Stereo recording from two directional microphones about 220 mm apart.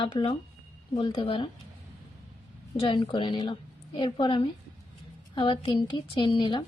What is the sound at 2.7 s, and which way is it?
A woman's voice, 20° left (ahead or behind).